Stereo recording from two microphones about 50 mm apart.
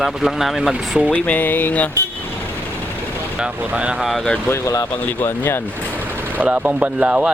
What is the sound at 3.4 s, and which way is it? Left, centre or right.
Speech, right.